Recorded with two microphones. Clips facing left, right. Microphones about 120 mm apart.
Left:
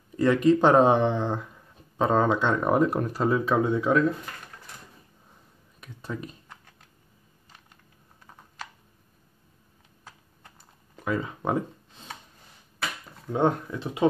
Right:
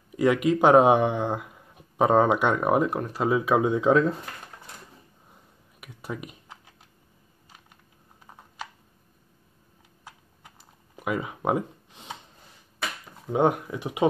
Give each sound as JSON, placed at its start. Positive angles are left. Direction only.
{"t": 0.1, "sound": "speech", "side_deg": -10}
{"t": 3.3, "sound": "speech", "side_deg": -10}
{"t": 5.8, "sound": "typing", "side_deg": -15}
{"t": 11.0, "sound": "a sound", "side_deg": -15}
{"t": 13.3, "sound": "speech", "side_deg": -15}